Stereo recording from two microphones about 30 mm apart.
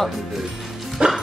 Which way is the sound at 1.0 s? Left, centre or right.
Right.